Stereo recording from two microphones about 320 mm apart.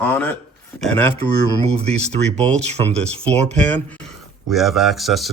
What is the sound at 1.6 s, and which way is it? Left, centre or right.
Speech, centre.